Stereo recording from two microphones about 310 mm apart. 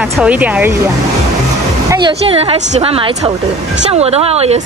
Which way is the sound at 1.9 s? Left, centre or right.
Centre.